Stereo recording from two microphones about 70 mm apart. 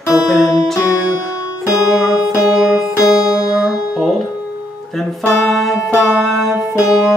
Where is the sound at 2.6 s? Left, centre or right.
Centre.